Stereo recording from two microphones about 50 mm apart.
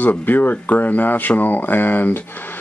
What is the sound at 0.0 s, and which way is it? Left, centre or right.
Speech, left.